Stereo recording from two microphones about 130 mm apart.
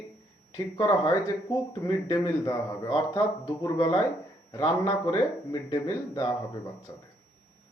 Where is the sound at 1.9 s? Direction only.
35° left (ahead or behind).